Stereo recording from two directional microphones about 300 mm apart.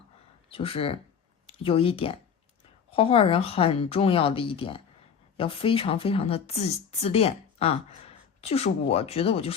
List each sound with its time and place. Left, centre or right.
0.5 s speech: centre